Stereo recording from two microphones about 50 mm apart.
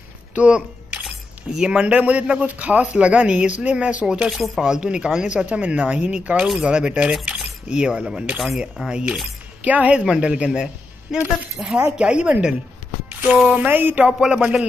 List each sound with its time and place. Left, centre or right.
0.3 s a sound: right
1.0 s a sound: centre
1.8 s a man's voice: right
4.3 s a man's voice: centre
8.4 s speech: centre
8.8 s speech: centre
9.7 s a man's voice: right
10.0 s a man's voice: centre
11.6 s a man's voice: right
13.7 s speech: right
14.0 s a man's voice: centre